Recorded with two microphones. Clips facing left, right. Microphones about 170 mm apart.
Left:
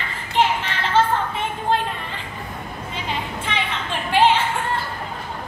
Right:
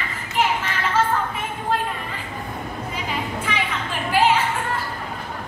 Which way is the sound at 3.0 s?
25° left (ahead or behind).